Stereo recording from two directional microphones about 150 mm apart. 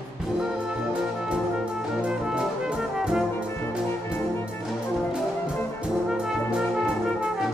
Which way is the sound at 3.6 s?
15° left (ahead or behind).